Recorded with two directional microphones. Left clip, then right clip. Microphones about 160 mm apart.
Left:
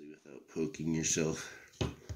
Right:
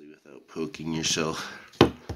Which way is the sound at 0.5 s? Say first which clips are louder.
Right 4 dB; 20° left (ahead or behind).